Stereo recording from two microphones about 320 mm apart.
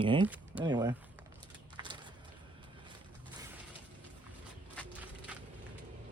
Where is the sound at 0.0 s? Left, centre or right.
Centre.